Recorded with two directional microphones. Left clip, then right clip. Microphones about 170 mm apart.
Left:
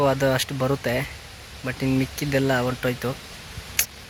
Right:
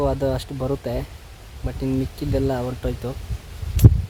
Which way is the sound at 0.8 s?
Centre (ahead or behind).